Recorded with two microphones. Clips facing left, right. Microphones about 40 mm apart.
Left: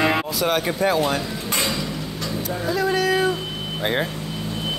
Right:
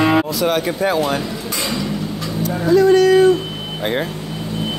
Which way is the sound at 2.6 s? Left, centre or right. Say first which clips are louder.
Right 10 dB; centre.